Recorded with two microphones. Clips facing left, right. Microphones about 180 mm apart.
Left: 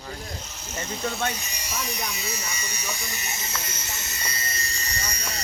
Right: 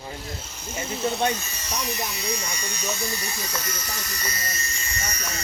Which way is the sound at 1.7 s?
Centre (ahead or behind).